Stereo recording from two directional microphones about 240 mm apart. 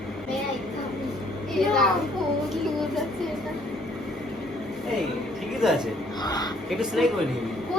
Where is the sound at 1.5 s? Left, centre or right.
Centre.